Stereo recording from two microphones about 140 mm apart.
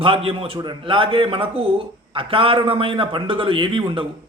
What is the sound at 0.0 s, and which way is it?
A man's voice, 40° right (ahead or behind).